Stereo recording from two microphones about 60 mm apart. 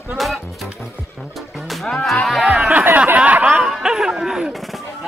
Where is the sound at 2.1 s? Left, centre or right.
Centre.